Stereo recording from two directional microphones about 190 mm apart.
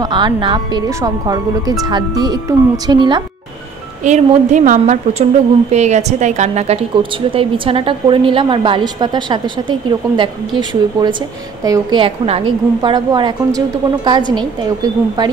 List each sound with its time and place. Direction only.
0.0 s a woman's voice: 25° right (ahead or behind)
4.0 s a woman's voice: 40° right (ahead or behind); by 15.2 s 20° right (ahead or behind)